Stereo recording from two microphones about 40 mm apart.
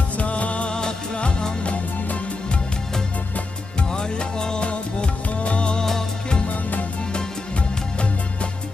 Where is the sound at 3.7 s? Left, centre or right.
Centre.